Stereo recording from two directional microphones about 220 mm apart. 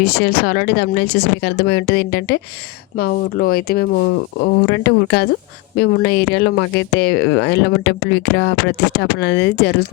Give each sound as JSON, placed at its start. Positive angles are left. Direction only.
{"t": 0.0, "sound": "speech", "side_deg": 45}